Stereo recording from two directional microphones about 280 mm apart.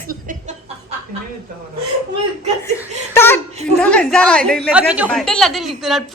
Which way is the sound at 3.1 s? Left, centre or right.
Centre.